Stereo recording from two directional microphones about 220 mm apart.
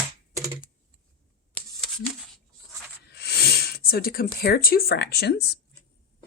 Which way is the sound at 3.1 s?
45° left (ahead or behind).